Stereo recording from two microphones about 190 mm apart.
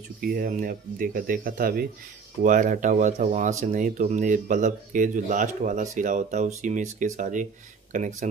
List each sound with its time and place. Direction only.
0.2 s speech: 50° right (ahead or behind)